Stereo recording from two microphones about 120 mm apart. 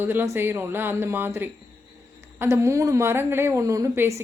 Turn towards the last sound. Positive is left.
turn(degrees=-25)  # may be behind; listen again after turning